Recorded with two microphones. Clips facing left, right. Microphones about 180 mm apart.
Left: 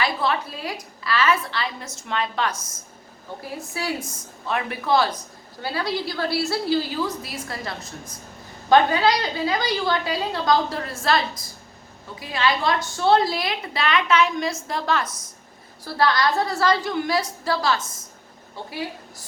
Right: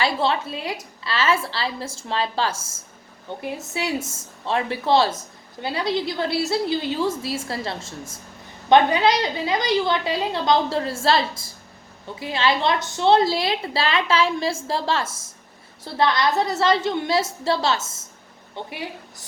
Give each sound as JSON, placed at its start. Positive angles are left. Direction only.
{"t": 0.0, "sound": "a woman's voice", "side_deg": -25}
{"t": 3.6, "sound": "a woman's voice", "side_deg": -25}